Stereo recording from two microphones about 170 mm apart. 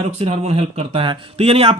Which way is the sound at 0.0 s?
35° right (ahead or behind).